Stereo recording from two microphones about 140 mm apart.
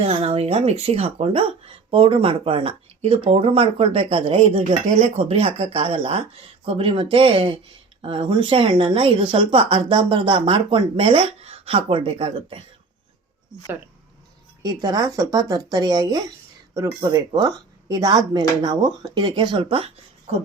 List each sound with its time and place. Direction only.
0.0 s speech: 45° right (ahead or behind)
4.9 s speech: 65° right (ahead or behind)
5.1 s speech: 45° right (ahead or behind)
14.6 s speech: 30° right (ahead or behind)